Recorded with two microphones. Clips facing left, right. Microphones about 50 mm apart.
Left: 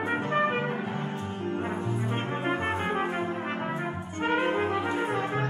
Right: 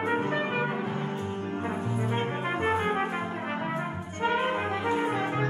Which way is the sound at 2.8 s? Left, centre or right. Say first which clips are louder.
Right 1 dB; centre.